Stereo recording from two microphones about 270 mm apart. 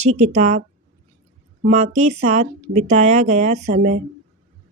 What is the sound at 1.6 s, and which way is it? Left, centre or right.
Speech, right.